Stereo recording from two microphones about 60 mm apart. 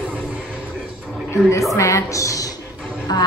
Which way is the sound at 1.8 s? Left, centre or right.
Left.